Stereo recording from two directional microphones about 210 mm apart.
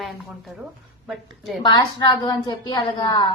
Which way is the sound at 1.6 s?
20° left (ahead or behind).